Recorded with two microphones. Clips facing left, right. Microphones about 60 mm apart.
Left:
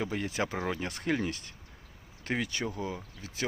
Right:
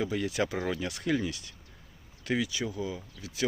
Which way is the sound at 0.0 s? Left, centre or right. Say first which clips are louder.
Right 2 dB; left.